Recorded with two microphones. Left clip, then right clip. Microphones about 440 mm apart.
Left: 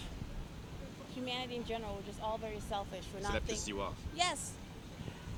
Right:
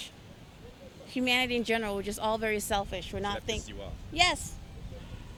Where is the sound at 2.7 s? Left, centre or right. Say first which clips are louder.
Right 9 dB; right.